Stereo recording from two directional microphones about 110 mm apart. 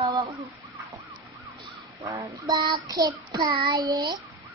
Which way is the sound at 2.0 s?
30° right (ahead or behind).